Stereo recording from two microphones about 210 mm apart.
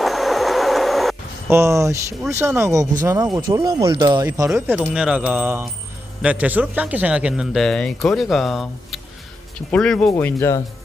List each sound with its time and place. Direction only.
0.0 s train: centre (ahead or behind)
1.5 s speech: 15° right (ahead or behind); by 10.6 s 10° left (ahead or behind)